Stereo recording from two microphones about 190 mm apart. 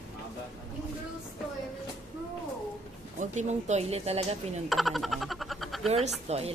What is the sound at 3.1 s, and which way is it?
Speech, 40° right (ahead or behind).